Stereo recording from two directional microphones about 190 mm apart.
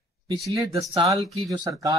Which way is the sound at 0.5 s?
15° right (ahead or behind).